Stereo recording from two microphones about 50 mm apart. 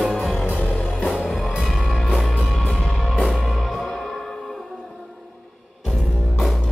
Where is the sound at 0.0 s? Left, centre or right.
Centre.